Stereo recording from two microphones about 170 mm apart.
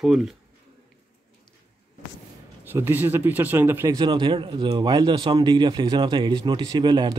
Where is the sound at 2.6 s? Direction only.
10° right (ahead or behind).